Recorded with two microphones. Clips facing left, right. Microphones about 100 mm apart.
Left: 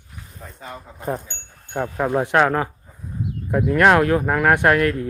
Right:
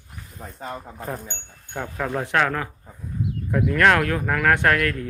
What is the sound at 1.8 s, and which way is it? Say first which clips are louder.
Speech: left 6 dB; 25° left (ahead or behind).